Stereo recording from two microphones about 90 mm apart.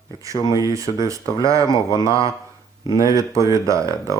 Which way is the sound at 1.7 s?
55° left (ahead or behind).